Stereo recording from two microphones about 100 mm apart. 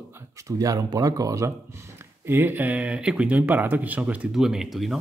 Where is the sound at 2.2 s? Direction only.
20° right (ahead or behind).